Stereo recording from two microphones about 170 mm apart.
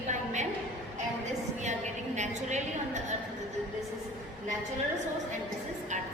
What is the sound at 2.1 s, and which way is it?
A woman's voice, 45° right (ahead or behind).